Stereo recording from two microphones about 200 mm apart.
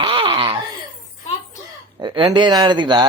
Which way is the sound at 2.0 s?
25° right (ahead or behind).